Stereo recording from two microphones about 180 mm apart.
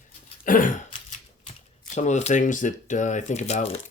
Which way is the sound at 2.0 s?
40° left (ahead or behind).